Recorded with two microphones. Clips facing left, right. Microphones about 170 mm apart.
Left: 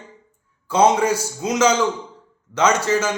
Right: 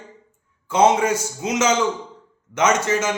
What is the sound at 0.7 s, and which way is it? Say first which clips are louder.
A man's voice: even; 20° right (ahead or behind).